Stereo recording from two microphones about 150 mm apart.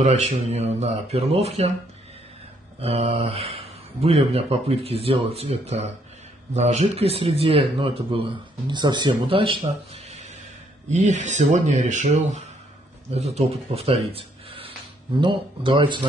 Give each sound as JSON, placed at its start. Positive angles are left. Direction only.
{"t": 0.0, "sound": "speech", "side_deg": -50}
{"t": 2.8, "sound": "speech", "side_deg": -45}
{"t": 10.9, "sound": "speech", "side_deg": -55}